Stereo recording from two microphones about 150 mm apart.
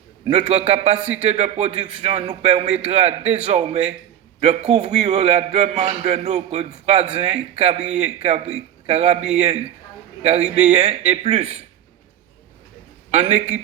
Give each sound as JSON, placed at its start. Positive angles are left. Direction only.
{"t": 0.3, "sound": "a man's voice", "side_deg": -45}
{"t": 13.1, "sound": "speech", "side_deg": -50}